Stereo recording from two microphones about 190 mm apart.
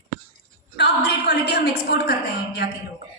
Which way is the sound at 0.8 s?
65° left (ahead or behind).